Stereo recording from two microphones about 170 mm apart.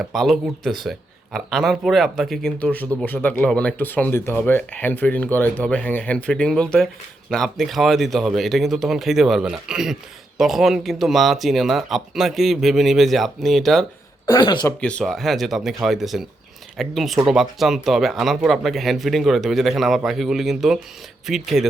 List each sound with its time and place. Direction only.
0.0 s speech: centre (ahead or behind)
14.4 s speech: 25° left (ahead or behind)
14.8 s speech: 5° left (ahead or behind)